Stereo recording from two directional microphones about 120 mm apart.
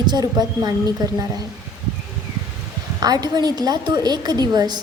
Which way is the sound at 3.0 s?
35° right (ahead or behind).